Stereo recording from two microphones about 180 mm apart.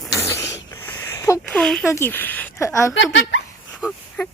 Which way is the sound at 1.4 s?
5° left (ahead or behind).